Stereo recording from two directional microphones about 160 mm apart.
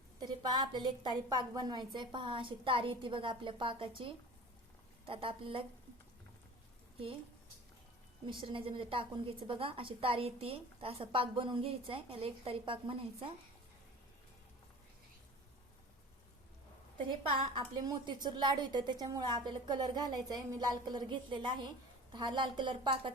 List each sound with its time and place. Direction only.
0.2 s a woman's voice: 25° right (ahead or behind)
8.3 s a woman's voice: 30° right (ahead or behind)
17.3 s a woman's voice: 30° right (ahead or behind)